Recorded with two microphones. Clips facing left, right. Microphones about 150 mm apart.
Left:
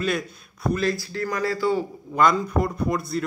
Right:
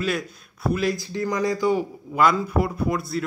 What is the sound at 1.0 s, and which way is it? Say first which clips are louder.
Speech: right 2 dB; 20° right (ahead or behind).